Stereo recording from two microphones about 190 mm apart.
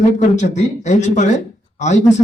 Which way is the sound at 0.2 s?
40° left (ahead or behind).